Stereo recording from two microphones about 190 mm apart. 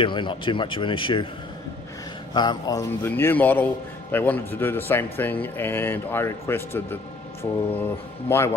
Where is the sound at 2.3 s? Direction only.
20° left (ahead or behind).